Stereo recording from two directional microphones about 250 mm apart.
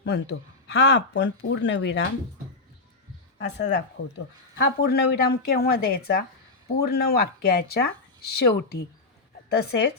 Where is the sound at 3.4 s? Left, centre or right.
Left.